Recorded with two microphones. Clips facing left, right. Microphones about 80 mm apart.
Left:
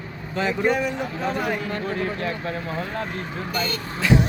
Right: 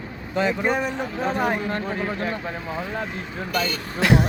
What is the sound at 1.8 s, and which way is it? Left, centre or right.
Speech, centre.